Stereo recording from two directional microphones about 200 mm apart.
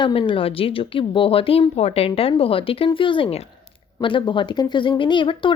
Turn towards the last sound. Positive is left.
turn(degrees=25)  # may be behind; listen again after turning